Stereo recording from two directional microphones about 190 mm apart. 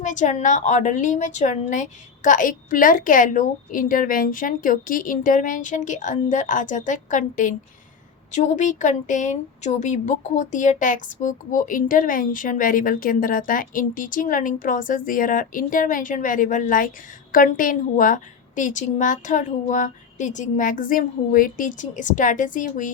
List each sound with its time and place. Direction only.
0.0 s a woman's voice: 40° left (ahead or behind)